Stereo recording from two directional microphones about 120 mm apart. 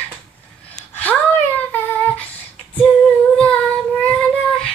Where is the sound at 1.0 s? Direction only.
15° left (ahead or behind).